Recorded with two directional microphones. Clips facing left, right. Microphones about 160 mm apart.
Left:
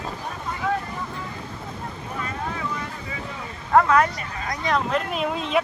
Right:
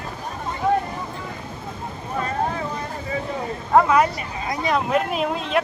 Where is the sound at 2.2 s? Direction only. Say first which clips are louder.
Right 7 dB; 40° right (ahead or behind).